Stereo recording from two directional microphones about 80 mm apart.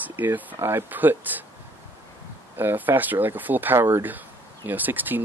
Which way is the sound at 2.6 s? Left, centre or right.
Right.